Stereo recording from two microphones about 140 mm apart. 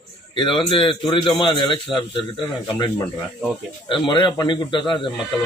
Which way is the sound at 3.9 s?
35° left (ahead or behind).